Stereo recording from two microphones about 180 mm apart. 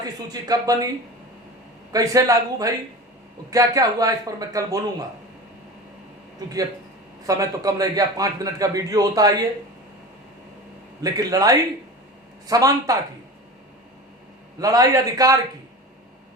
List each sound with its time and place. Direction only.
0.0 s a man's voice: 20° right (ahead or behind)
1.9 s a man's voice: 20° right (ahead or behind)
7.3 s a man's voice: 20° right (ahead or behind)
11.0 s a man's voice: 20° right (ahead or behind)
14.6 s a man's voice: 20° right (ahead or behind)